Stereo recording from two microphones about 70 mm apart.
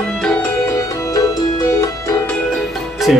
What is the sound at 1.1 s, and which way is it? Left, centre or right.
Music, left.